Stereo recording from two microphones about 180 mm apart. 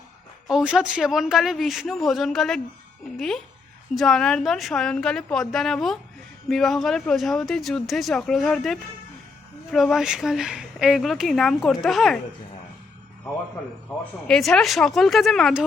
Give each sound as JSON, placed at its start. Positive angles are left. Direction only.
{"t": 0.4, "sound": "speech", "side_deg": -5}
{"t": 14.0, "sound": "speech", "side_deg": 5}